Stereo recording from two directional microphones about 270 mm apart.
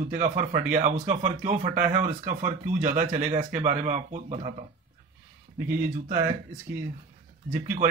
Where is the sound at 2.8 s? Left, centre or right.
Right.